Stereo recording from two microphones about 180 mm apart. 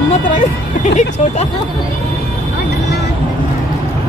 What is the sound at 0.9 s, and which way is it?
Speech, 40° left (ahead or behind).